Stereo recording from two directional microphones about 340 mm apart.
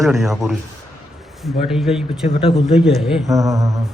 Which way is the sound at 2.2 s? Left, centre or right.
Centre.